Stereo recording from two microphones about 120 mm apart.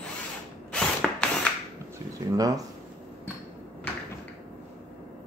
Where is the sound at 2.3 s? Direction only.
30° right (ahead or behind).